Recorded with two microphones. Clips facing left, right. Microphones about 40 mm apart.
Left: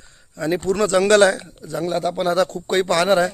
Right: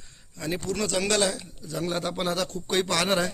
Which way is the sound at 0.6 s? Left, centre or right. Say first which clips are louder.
Left 10 dB; left.